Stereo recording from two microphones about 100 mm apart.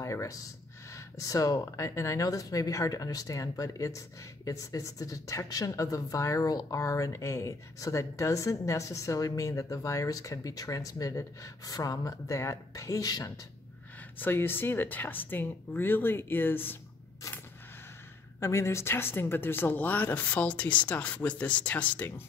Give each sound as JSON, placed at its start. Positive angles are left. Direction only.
{"t": 0.0, "sound": "a woman's voice", "side_deg": 30}
{"t": 14.2, "sound": "speech", "side_deg": 20}
{"t": 18.4, "sound": "speech", "side_deg": 25}